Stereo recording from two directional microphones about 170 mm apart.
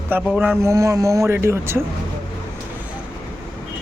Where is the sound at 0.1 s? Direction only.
10° right (ahead or behind).